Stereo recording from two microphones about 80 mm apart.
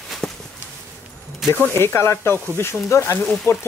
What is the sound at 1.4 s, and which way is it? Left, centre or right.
Speech, centre.